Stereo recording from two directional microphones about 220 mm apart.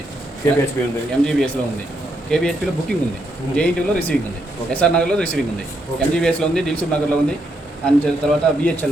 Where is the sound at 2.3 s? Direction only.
5° left (ahead or behind).